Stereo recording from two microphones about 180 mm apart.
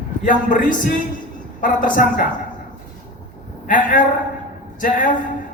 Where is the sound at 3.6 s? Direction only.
50° left (ahead or behind).